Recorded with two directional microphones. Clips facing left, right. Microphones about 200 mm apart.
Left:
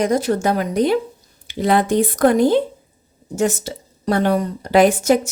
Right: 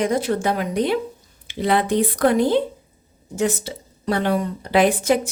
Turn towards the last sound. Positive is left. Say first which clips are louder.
# left 3 dB
turn(degrees=45)  # may be behind; listen again after turning